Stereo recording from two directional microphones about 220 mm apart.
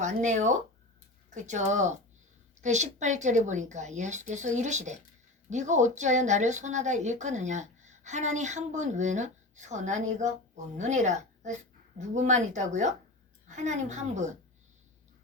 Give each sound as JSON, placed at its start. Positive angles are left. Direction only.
{"t": 0.0, "sound": "speech", "side_deg": -35}